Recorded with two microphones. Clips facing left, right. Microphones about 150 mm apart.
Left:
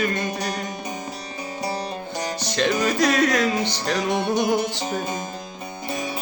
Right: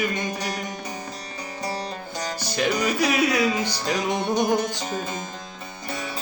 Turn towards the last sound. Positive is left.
turn(degrees=20)  # may be behind; listen again after turning